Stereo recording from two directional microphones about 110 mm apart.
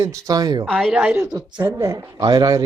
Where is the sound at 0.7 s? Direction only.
Centre (ahead or behind).